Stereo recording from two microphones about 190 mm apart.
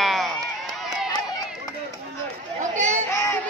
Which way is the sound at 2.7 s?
40° right (ahead or behind).